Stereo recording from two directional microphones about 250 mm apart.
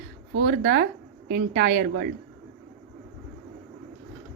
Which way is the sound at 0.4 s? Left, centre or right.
Right.